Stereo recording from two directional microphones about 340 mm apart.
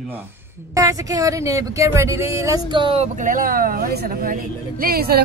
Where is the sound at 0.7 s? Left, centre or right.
Centre.